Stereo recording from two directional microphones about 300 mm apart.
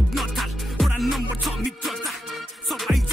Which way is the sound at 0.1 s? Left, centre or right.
Centre.